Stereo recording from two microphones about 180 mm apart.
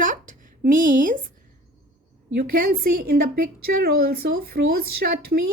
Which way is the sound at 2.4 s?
55° right (ahead or behind).